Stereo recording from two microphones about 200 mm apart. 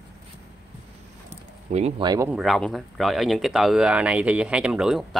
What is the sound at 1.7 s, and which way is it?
Speech, 35° right (ahead or behind).